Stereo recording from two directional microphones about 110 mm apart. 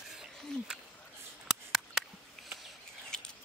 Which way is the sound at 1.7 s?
5° left (ahead or behind).